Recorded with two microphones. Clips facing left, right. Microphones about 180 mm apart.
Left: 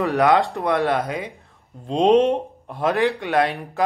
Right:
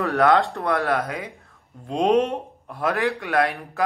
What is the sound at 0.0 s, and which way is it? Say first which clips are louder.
Speech: left 1 dB; 20° left (ahead or behind).